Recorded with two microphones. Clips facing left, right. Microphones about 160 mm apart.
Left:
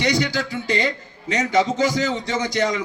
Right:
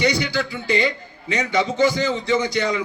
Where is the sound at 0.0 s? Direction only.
40° left (ahead or behind).